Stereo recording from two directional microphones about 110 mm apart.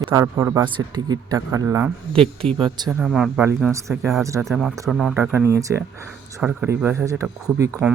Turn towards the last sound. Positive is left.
turn(degrees=-30)  # may be behind; listen again after turning